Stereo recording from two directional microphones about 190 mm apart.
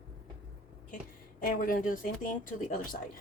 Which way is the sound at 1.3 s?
45° left (ahead or behind).